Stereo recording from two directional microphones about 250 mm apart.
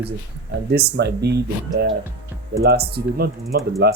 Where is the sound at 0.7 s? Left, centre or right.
Right.